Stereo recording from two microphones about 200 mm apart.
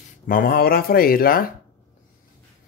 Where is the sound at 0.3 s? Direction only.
50° left (ahead or behind).